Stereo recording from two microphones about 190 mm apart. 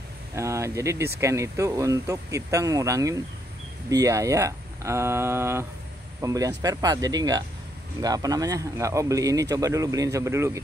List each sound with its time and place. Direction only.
0.3 s speech: 15° right (ahead or behind)